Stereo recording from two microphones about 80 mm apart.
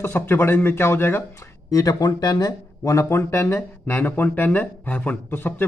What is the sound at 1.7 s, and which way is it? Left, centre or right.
A man's voice, left.